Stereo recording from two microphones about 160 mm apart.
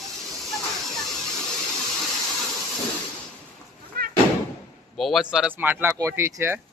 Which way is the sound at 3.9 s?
75° right (ahead or behind).